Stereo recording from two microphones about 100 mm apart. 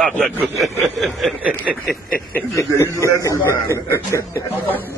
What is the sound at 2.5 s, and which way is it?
Speech, 30° left (ahead or behind).